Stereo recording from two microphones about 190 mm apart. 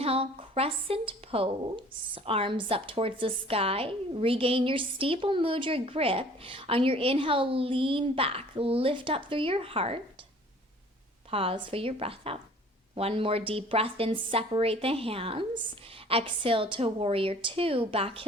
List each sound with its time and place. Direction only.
0.0 s a woman's voice: 30° right (ahead or behind)
11.3 s a woman's voice: 30° right (ahead or behind)